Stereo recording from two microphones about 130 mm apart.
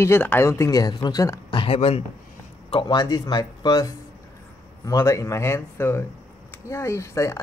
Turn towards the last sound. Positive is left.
turn(degrees=25)  # may be behind; listen again after turning